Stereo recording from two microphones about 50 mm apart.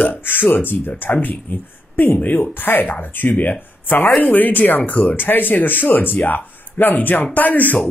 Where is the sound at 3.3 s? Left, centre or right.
Left.